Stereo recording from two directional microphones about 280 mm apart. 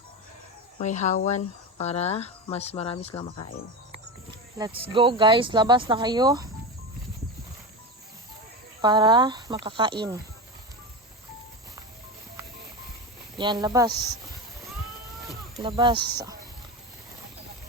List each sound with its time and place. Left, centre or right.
0.8 s speech: left
4.5 s speech: centre
8.8 s speech: centre
13.3 s speech: centre
15.6 s speech: centre